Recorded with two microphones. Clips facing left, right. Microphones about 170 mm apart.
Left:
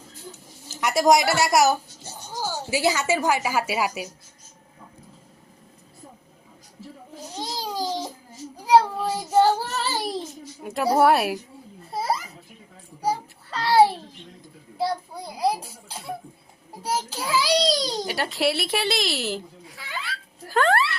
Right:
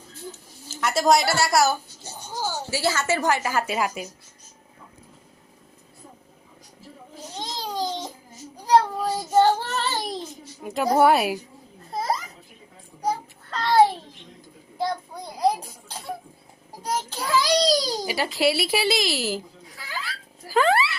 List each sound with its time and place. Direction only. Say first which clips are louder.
0.8 s a woman's voice: left 1 dB; 15° left (ahead or behind)
7.5 s a sound: even; 5° left (ahead or behind)
8.6 s child singing: left 1 dB; 5° left (ahead or behind)
10.6 s a child's voice: even; centre (ahead or behind)
11.9 s a sound: even; 5° left (ahead or behind)
16.8 s a child's voice: even; 5° left (ahead or behind)